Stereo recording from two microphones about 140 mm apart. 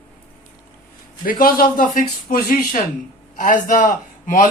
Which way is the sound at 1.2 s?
85° left.